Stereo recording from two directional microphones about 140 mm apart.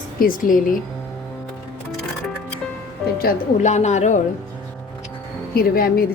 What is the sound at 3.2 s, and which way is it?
A woman's voice, 60° left (ahead or behind).